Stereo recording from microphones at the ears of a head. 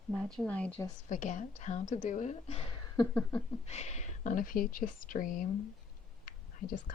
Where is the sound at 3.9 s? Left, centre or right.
Left.